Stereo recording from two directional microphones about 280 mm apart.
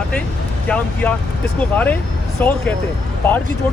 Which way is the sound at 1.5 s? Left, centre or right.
Centre.